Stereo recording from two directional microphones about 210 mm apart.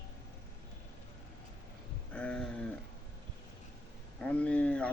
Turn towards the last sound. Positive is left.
turn(degrees=5)  # may be behind; listen again after turning